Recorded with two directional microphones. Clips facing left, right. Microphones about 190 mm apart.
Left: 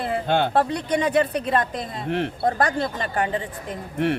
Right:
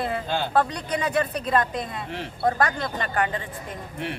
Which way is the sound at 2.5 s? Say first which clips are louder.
Left 2 dB; 30° left (ahead or behind).